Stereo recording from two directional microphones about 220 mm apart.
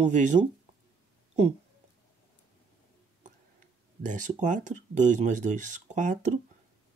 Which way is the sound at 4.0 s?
35° right (ahead or behind).